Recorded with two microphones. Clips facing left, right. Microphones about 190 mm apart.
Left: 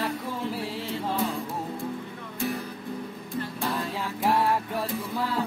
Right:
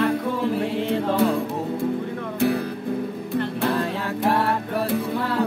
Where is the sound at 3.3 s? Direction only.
65° right (ahead or behind).